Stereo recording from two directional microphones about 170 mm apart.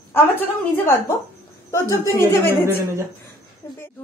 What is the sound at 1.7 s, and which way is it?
Speech, 15° left (ahead or behind).